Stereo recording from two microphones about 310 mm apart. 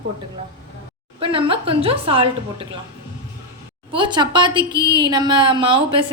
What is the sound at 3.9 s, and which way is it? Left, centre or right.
A woman's voice, centre.